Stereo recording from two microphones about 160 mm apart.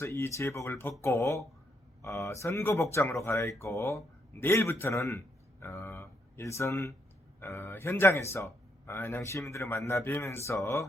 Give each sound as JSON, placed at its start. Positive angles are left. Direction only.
{"t": 0.0, "sound": "a man's voice", "side_deg": 15}